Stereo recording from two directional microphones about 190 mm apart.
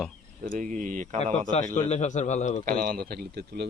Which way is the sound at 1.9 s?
40° left (ahead or behind).